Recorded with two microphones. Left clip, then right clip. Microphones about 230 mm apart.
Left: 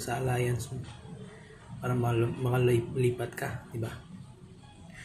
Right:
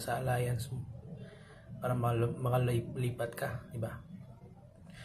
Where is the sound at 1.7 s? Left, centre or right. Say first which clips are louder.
Left 3 dB; centre.